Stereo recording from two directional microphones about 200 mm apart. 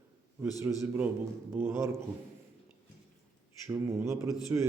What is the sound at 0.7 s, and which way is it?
A man's voice, 10° right (ahead or behind).